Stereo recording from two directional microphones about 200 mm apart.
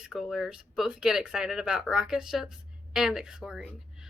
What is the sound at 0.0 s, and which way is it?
Speech, centre (ahead or behind).